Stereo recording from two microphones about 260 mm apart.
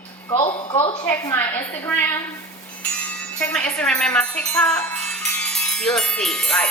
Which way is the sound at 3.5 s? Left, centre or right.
Centre.